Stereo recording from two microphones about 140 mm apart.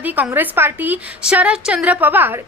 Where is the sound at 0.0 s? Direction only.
10° right (ahead or behind).